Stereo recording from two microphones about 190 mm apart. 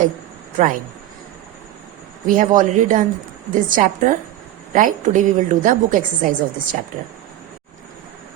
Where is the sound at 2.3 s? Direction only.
45° right (ahead or behind).